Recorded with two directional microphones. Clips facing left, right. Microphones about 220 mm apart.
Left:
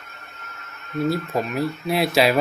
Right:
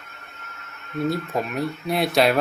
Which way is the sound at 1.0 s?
Centre (ahead or behind).